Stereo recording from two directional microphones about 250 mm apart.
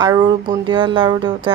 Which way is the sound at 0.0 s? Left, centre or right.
Centre.